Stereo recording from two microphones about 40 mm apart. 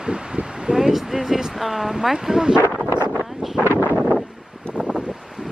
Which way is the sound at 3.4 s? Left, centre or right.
Centre.